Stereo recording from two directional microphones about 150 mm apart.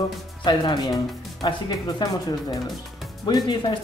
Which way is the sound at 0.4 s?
30° left (ahead or behind).